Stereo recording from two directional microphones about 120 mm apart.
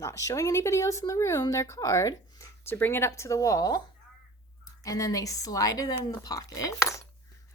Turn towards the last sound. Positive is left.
turn(degrees=30)  # may be behind; listen again after turning